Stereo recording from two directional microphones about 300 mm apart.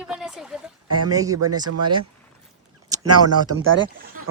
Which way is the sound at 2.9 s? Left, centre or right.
Right.